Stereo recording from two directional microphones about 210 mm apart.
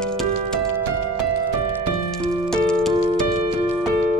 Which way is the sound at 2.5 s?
5° left (ahead or behind).